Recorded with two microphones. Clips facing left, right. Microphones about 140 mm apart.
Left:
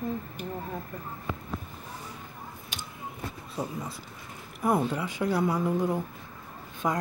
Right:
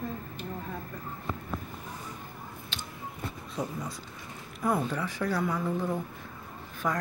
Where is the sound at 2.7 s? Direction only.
15° left (ahead or behind).